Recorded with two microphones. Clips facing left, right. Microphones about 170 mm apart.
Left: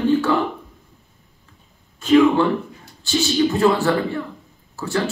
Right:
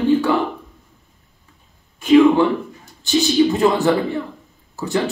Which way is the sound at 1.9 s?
15° right (ahead or behind).